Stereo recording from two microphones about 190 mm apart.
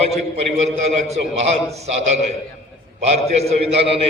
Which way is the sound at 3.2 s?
35° right (ahead or behind).